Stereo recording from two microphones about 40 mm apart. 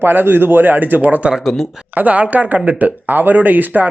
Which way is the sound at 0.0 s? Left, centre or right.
Right.